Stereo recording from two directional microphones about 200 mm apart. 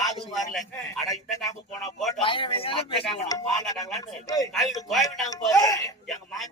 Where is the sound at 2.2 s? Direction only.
25° left (ahead or behind).